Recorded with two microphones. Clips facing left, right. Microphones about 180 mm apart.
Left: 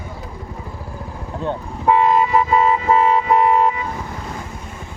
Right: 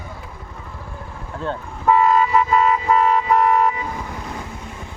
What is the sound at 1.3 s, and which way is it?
Toot, 20° left (ahead or behind).